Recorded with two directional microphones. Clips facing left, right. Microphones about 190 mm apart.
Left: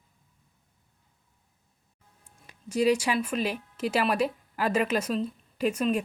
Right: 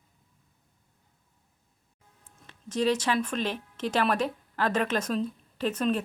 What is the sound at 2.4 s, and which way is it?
Speech, 10° left (ahead or behind).